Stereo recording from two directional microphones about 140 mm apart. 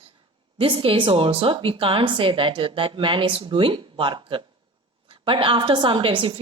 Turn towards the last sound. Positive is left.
turn(degrees=-35)  # may be behind; listen again after turning